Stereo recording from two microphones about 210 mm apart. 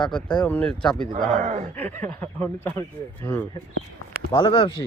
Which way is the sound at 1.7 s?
5° left (ahead or behind).